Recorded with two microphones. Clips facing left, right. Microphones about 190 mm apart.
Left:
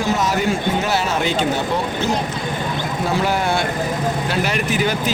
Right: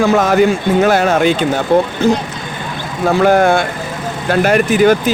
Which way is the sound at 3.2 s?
55° right (ahead or behind).